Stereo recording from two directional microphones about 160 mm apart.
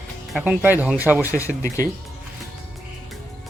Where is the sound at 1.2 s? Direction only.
20° left (ahead or behind).